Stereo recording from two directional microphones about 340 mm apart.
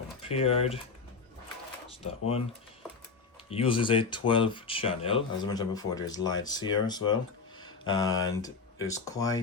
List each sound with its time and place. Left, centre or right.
0.2 s speech: centre
3.5 s speech: centre